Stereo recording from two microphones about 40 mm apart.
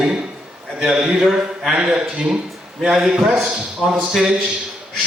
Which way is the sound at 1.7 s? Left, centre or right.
Right.